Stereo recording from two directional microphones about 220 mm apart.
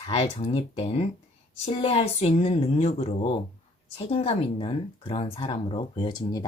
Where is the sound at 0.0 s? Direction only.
25° left (ahead or behind).